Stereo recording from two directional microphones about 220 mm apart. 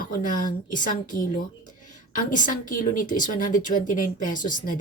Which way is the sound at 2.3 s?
35° left (ahead or behind).